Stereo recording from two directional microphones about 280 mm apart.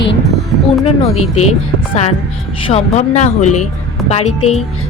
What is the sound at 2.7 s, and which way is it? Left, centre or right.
A woman's voice, left.